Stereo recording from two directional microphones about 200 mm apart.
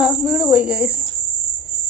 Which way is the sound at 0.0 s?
5° right (ahead or behind).